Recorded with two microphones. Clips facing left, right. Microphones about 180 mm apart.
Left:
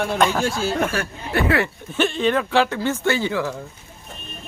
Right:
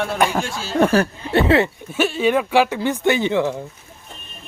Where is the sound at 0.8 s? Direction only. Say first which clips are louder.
Right 7 dB; 35° right (ahead or behind).